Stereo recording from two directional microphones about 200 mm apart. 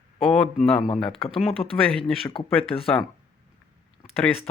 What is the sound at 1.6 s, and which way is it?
Speech, 25° left (ahead or behind).